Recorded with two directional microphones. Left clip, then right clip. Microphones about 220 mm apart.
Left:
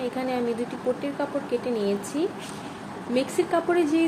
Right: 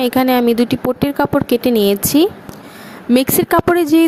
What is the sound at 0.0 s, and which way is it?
A woman's voice, 50° right (ahead or behind).